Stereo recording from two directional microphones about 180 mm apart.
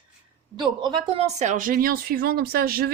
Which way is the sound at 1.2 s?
40° right (ahead or behind).